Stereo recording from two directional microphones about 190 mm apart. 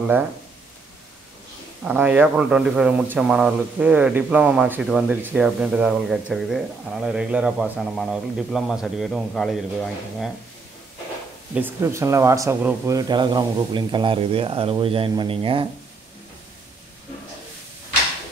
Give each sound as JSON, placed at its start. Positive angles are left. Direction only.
{"t": 1.9, "sound": "speech", "side_deg": -10}
{"t": 11.5, "sound": "speech", "side_deg": -10}